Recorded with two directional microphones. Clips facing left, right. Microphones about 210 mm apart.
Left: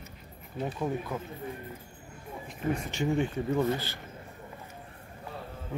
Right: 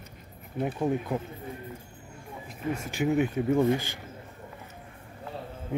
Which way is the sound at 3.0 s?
5° right (ahead or behind).